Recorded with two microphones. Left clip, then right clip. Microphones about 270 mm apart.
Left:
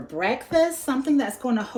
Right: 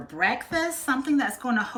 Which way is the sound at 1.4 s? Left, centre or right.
Centre.